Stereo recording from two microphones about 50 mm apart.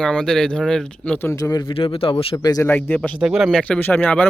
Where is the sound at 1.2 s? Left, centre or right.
Left.